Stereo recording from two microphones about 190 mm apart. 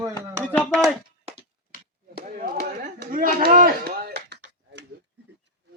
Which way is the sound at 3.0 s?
45° right (ahead or behind).